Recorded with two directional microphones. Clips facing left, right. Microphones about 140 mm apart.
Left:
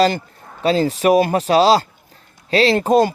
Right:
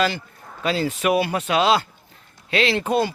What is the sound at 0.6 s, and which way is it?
Speech, 35° left (ahead or behind).